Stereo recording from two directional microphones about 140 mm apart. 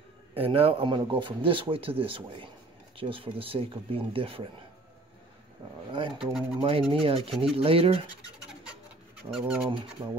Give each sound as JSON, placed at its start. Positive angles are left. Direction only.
{"t": 0.3, "sound": "speech", "side_deg": -45}
{"t": 5.9, "sound": "speech", "side_deg": -35}
{"t": 7.2, "sound": "speech", "side_deg": 0}
{"t": 7.5, "sound": "speech", "side_deg": -40}
{"t": 9.3, "sound": "speech", "side_deg": -5}